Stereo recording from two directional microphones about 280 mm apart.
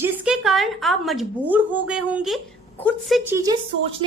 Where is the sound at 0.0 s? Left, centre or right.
Centre.